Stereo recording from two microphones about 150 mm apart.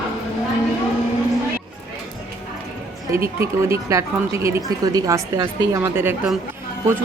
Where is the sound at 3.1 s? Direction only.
20° right (ahead or behind).